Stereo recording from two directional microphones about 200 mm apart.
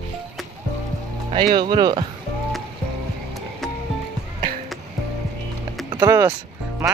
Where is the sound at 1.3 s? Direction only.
20° right (ahead or behind).